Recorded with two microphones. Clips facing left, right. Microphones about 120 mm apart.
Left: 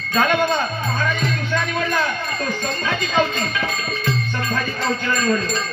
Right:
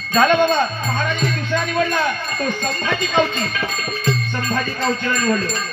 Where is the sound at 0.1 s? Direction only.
25° right (ahead or behind).